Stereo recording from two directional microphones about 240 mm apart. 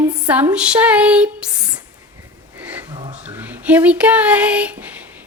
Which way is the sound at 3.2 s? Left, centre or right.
Centre.